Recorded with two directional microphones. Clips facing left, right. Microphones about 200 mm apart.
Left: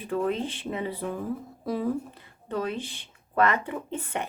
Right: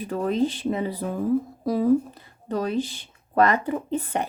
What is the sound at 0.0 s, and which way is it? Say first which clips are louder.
Speech: right 4 dB; 40° right (ahead or behind).